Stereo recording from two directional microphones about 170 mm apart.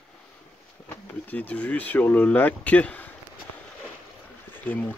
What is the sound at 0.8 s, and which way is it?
Speech, 10° left (ahead or behind).